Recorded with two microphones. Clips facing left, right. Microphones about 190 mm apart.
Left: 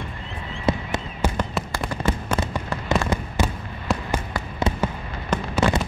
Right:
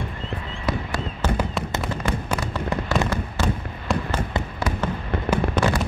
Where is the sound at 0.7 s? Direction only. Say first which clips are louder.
Left 3 dB; 25° left (ahead or behind).